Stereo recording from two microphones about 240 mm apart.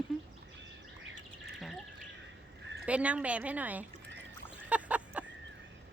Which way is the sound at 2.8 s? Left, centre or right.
Centre.